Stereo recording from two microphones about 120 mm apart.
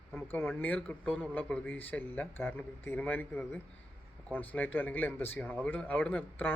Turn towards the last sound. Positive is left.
turn(degrees=15)  # may be behind; listen again after turning